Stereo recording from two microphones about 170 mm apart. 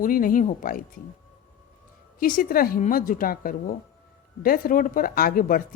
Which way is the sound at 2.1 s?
50° left (ahead or behind).